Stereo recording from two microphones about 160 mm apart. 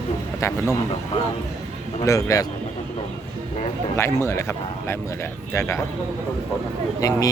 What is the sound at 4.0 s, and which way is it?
Speech, 15° left (ahead or behind).